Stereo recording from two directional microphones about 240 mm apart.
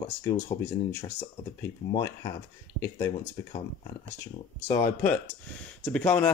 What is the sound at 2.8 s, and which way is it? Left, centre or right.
Speech, centre.